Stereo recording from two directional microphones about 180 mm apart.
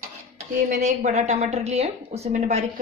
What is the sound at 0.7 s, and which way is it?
A woman's voice, 40° right (ahead or behind).